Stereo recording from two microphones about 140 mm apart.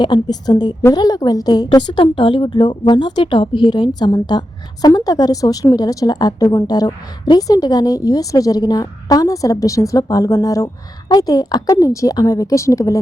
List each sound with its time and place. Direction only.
0.0 s a woman's voice: 30° left (ahead or behind)